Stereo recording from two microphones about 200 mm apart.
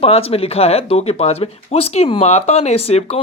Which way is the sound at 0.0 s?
30° left (ahead or behind).